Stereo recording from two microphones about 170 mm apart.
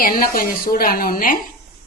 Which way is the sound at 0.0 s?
55° left (ahead or behind).